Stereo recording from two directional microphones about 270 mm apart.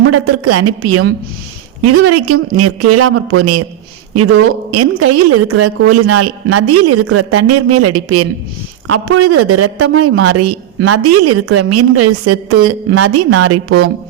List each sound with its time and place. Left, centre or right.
0.1 s a man's voice: right
4.8 s a man's voice: right